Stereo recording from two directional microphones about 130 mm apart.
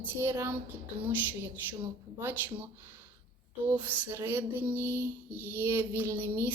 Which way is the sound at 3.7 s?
15° right (ahead or behind).